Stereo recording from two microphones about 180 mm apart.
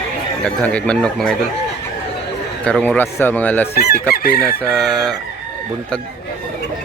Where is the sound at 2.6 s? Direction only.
5° left (ahead or behind).